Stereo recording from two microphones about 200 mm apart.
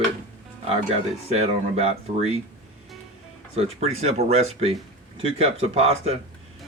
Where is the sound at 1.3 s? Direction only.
30° right (ahead or behind).